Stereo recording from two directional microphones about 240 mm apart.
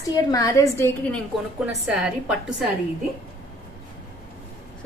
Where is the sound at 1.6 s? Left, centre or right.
Centre.